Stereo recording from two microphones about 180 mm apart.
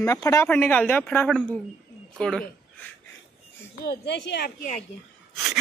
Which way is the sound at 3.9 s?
70° left (ahead or behind).